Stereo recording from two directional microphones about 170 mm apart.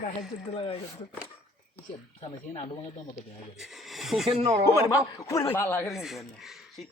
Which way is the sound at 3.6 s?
Centre (ahead or behind).